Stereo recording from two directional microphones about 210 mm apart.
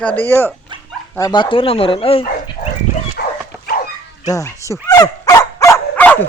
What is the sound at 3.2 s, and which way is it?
Dog, 50° left (ahead or behind).